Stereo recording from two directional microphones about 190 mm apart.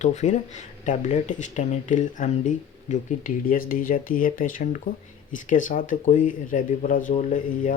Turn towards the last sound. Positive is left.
turn(degrees=45)  # may be behind; listen again after turning